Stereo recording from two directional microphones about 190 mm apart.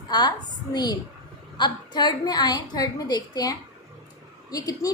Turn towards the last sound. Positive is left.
turn(degrees=20)  # may be behind; listen again after turning